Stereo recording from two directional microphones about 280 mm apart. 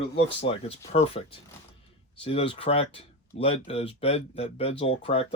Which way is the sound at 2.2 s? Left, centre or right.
Centre.